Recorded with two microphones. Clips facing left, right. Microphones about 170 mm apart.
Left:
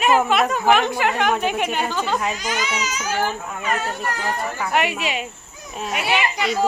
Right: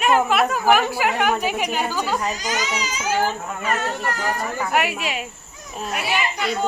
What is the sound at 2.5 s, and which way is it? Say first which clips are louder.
Speech: even; 40° right (ahead or behind).